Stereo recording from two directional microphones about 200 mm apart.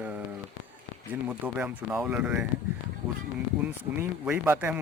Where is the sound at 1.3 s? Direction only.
5° right (ahead or behind).